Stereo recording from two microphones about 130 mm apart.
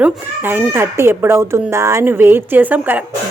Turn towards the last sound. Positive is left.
turn(degrees=-15)  # may be behind; listen again after turning